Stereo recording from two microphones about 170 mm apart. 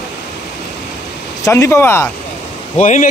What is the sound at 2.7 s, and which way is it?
Speech, 45° left (ahead or behind).